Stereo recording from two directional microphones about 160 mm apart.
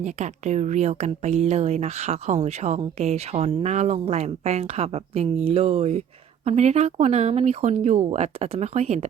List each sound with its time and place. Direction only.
0.0 s speech: 45° right (ahead or behind)